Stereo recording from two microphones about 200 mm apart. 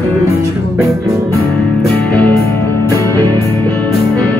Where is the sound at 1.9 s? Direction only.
10° left (ahead or behind).